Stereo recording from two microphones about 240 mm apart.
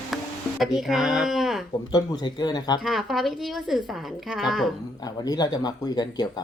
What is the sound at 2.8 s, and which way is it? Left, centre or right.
A woman's voice, centre.